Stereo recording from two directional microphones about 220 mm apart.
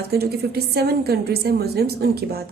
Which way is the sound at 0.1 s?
45° right (ahead or behind).